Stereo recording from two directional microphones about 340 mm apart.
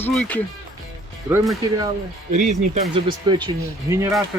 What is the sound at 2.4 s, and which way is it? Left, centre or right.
Speech, right.